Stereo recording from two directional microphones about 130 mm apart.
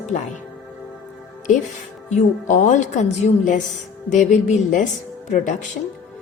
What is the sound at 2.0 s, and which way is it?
A woman's voice, 70° left (ahead or behind).